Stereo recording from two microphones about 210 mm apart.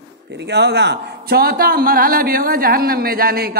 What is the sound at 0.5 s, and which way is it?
A man's voice, 55° right (ahead or behind).